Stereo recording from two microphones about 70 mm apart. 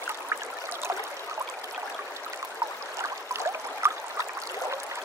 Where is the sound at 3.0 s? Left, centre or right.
Right.